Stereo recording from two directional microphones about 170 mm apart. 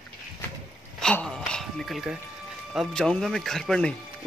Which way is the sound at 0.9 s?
5° left (ahead or behind).